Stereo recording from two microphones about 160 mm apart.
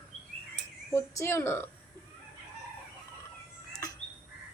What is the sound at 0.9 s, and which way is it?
Speech, 15° left (ahead or behind).